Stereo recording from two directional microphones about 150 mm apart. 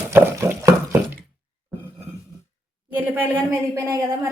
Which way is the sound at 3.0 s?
15° right (ahead or behind).